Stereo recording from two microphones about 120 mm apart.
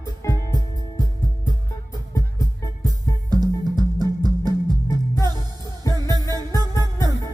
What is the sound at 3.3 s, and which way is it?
Music, 35° right (ahead or behind).